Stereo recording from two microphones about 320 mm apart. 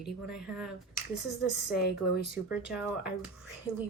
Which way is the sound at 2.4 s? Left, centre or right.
Centre.